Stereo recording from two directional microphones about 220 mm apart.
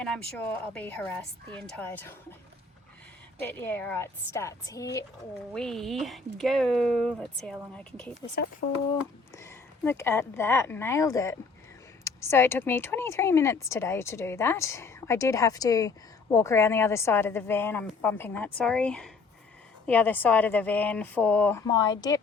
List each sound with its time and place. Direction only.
0.0 s speech: 5° left (ahead or behind)
3.4 s speech: 10° left (ahead or behind)
5.5 s speech: centre (ahead or behind)
9.3 s speech: 10° left (ahead or behind)
21.7 s speech: 20° left (ahead or behind)